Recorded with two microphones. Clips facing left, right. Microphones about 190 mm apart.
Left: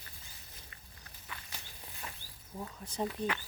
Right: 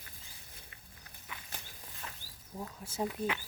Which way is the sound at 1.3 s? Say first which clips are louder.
Even; 15° right (ahead or behind).